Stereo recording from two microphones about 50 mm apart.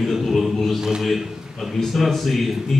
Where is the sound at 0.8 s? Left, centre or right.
Centre.